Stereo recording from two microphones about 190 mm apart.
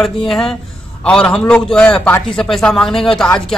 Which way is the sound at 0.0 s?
Centre (ahead or behind).